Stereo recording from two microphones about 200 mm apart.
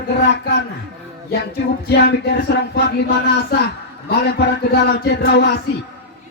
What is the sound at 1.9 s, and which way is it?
Speech, 55° left (ahead or behind).